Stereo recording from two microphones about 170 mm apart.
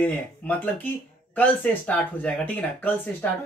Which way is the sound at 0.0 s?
10° left (ahead or behind).